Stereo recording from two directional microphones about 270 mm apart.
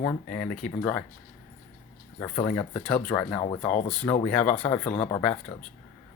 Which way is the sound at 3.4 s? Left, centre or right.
Left.